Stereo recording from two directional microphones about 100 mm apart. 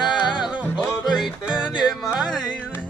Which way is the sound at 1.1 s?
5° right (ahead or behind).